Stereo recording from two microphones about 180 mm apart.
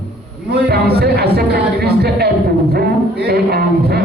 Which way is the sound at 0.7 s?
65° right (ahead or behind).